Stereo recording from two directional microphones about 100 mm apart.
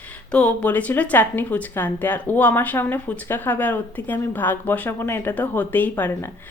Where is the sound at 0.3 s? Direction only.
10° left (ahead or behind).